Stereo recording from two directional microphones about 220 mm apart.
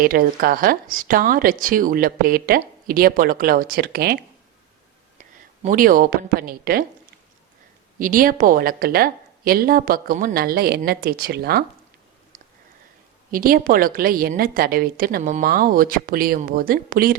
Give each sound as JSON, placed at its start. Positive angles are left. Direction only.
{"t": 0.0, "sound": "speech", "side_deg": -40}
{"t": 5.6, "sound": "speech", "side_deg": -40}
{"t": 7.9, "sound": "speech", "side_deg": -40}
{"t": 13.3, "sound": "speech", "side_deg": -40}